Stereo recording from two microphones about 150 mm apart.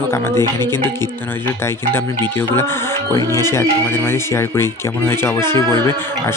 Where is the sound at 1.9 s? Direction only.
15° left (ahead or behind).